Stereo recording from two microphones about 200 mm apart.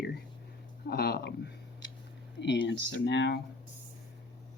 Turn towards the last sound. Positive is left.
turn(degrees=60)  # may be behind; listen again after turning